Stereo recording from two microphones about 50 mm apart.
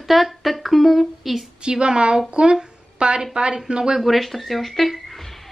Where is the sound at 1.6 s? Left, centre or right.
Centre.